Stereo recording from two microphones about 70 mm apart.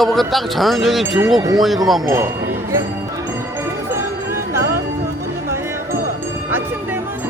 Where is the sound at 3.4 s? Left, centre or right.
Right.